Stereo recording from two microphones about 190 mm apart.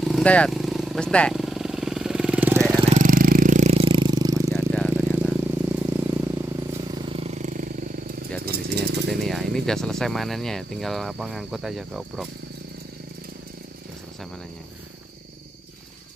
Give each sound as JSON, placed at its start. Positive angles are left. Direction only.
{"t": 0.0, "sound": "vehicle", "side_deg": 5}
{"t": 2.9, "sound": "vehicle", "side_deg": -45}
{"t": 4.6, "sound": "a sound", "side_deg": 5}
{"t": 5.7, "sound": "vehicle", "side_deg": -10}
{"t": 8.5, "sound": "a sound", "side_deg": -60}
{"t": 9.1, "sound": "speech", "side_deg": 0}